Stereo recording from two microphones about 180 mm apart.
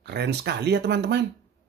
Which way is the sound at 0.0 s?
65° right (ahead or behind).